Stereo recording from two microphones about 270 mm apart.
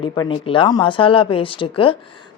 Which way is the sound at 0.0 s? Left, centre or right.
Centre.